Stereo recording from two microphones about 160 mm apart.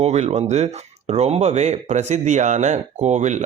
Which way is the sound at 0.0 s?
45° right (ahead or behind).